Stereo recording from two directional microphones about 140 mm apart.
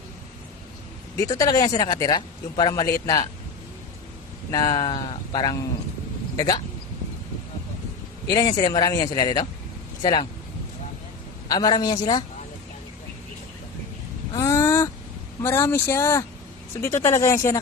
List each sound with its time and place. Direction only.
1.1 s speech: 25° left (ahead or behind)
4.5 s speech: 30° left (ahead or behind)
8.3 s speech: 25° left (ahead or behind)
11.4 s speech: 30° left (ahead or behind)
14.3 s a sound: 20° left (ahead or behind)
15.4 s speech: 20° left (ahead or behind)